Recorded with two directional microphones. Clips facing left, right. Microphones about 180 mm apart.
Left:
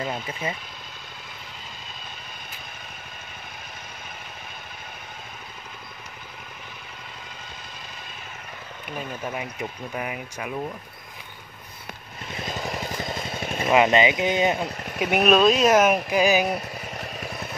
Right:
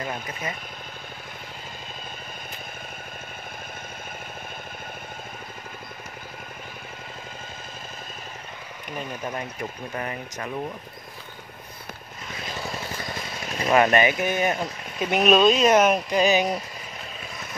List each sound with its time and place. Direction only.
0.0 s speech: 25° left (ahead or behind)
8.9 s speech: 5° left (ahead or behind)
12.4 s vehicle: 15° left (ahead or behind)
13.7 s speech: 20° left (ahead or behind)
14.6 s speech: 5° left (ahead or behind)
16.9 s vehicle: 65° left (ahead or behind)